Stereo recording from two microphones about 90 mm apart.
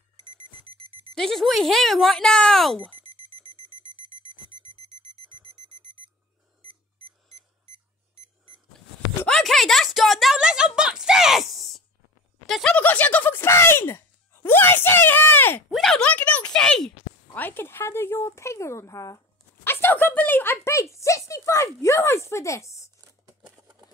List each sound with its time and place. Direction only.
1.1 s speech: 5° left (ahead or behind)
4.7 s alarm: 90° right
6.6 s alarm clock: 90° right
9.3 s speech: 5° left (ahead or behind)
10.8 s a sound: 10° right (ahead or behind)
12.4 s speech: centre (ahead or behind)
12.7 s speech: 15° left (ahead or behind)
15.7 s speech: 5° left (ahead or behind)
17.3 s speech: 20° left (ahead or behind)